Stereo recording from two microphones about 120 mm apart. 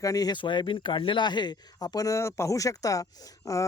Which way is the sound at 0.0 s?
30° left (ahead or behind).